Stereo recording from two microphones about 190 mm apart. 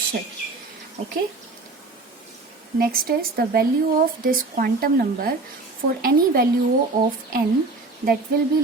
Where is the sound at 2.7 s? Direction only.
50° right (ahead or behind).